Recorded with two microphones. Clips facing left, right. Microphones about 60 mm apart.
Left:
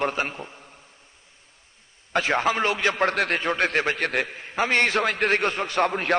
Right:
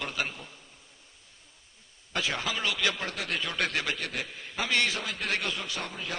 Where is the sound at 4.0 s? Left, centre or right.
Left.